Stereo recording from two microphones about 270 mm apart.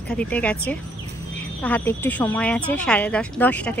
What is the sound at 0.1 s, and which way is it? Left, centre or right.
Speech, centre.